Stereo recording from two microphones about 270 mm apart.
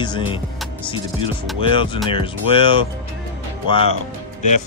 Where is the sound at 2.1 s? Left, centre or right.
Centre.